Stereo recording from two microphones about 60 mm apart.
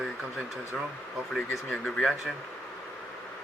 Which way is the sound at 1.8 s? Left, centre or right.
Centre.